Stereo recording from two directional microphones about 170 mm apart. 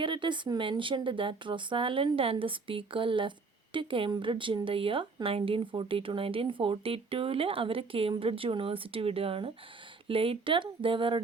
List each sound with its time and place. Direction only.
0.0 s speech: 30° right (ahead or behind)